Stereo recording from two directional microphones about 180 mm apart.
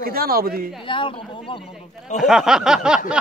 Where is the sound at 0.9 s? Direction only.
30° left (ahead or behind).